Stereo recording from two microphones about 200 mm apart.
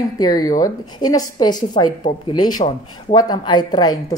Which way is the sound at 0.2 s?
20° left (ahead or behind).